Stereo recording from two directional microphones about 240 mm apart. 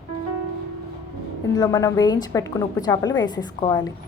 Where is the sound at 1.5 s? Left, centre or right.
Centre.